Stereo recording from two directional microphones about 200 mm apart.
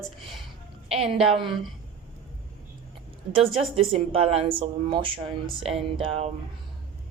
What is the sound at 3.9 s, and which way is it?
Speech, 30° right (ahead or behind).